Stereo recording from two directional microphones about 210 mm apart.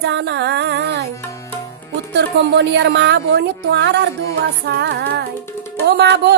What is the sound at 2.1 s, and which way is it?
Music, 55° right (ahead or behind).